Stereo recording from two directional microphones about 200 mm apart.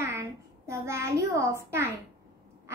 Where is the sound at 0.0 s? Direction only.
15° right (ahead or behind).